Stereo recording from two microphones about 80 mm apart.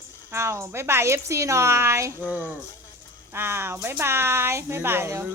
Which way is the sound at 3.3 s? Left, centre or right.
Right.